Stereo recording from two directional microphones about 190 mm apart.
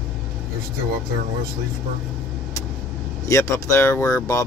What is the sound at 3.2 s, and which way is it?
Speech, 15° left (ahead or behind).